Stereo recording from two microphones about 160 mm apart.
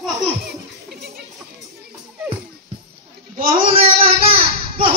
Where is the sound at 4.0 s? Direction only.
40° right (ahead or behind).